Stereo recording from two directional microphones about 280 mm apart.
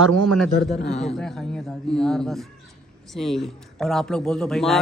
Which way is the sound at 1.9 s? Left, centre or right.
Centre.